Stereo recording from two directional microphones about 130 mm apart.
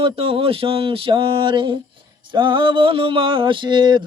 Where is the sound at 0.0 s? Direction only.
45° right (ahead or behind).